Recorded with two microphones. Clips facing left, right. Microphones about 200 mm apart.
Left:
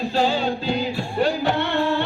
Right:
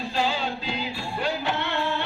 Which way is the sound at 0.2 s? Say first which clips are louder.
Left 5 dB; 40° left (ahead or behind).